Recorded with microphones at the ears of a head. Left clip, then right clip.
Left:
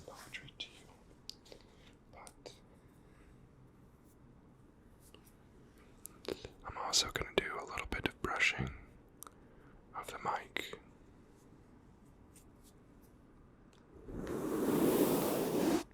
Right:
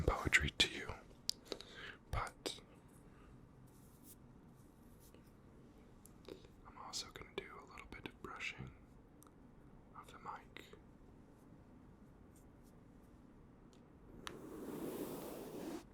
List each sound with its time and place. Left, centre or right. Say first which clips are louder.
0.0 s whispering: right 15 dB; right
6.2 s whispering: left 13 dB; left
9.9 s whispering: left 12 dB; left
14.1 s a sound: left 13 dB; left